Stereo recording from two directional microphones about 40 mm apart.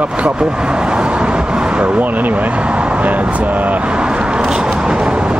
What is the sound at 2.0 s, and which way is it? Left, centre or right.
Speech, right.